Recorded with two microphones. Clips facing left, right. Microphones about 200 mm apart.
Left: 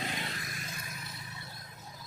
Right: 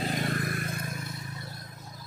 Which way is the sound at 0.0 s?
45° right (ahead or behind).